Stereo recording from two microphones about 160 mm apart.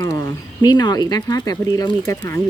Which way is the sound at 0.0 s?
25° left (ahead or behind).